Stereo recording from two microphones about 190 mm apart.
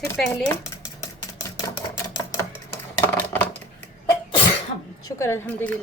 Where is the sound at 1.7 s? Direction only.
20° left (ahead or behind).